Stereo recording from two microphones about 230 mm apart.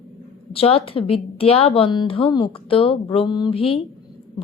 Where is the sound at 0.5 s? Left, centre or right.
Left.